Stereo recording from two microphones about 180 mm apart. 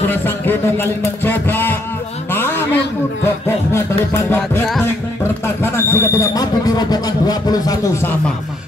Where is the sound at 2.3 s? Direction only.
10° left (ahead or behind).